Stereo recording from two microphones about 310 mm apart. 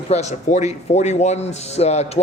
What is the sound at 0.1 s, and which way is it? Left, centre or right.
A man's voice, left.